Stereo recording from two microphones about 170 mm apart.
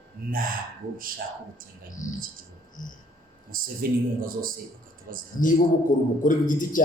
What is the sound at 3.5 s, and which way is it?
Speech, 55° right (ahead or behind).